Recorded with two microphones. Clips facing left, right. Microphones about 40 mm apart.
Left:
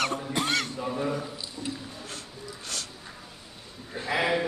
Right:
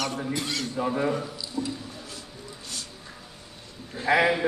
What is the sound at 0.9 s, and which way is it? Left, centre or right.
Speech, right.